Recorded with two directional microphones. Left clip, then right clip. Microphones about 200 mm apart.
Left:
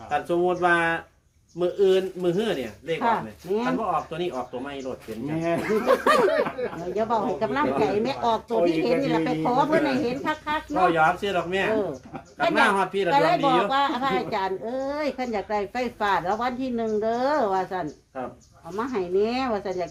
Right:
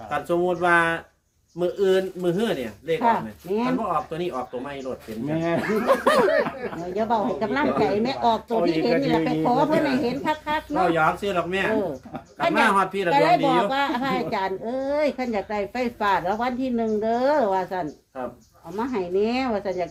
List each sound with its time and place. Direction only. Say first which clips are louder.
0.1 s speech: even; 25° right (ahead or behind)
3.0 s a woman's voice: right 2 dB; 10° left (ahead or behind)
4.1 s speech: right 1 dB; 25° right (ahead or behind)
5.8 s a woman's voice: right 1 dB; 15° left (ahead or behind)
10.9 s speech: even; 20° right (ahead or behind)
12.4 s a woman's voice: even; 10° left (ahead or behind)
12.7 s speech: right 2 dB; 25° right (ahead or behind)
13.1 s a woman's voice: right 1 dB; 10° left (ahead or behind)